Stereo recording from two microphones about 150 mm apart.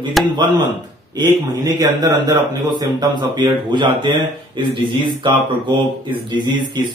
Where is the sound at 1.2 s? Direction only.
30° right (ahead or behind).